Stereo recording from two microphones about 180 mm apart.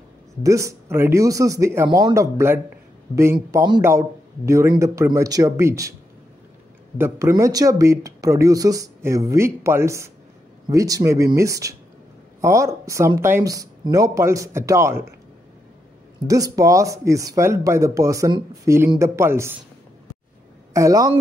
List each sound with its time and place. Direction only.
0.4 s speech: 15° right (ahead or behind)
7.0 s speech: 15° right (ahead or behind)
16.3 s speech: 20° right (ahead or behind)
20.7 s speech: 20° right (ahead or behind)